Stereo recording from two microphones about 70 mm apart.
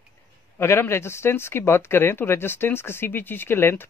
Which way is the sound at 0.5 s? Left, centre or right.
Left.